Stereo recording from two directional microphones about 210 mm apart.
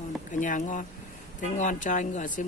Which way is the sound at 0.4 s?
35° left (ahead or behind).